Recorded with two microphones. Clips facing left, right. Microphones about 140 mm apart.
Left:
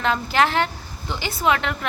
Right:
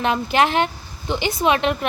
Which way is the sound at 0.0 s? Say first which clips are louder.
Right 2 dB; 20° right (ahead or behind).